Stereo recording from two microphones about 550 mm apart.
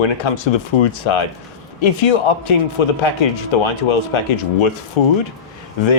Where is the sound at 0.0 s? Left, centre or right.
Left.